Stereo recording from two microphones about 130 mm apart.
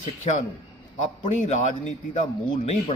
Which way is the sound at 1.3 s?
60° left (ahead or behind).